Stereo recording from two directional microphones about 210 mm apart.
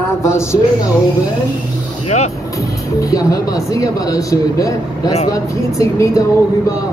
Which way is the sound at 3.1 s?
15° left (ahead or behind).